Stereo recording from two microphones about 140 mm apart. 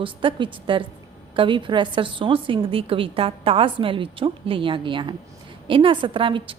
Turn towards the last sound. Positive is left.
turn(degrees=-40)  # may be behind; listen again after turning